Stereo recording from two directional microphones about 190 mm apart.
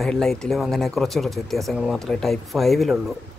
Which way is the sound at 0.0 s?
Centre (ahead or behind).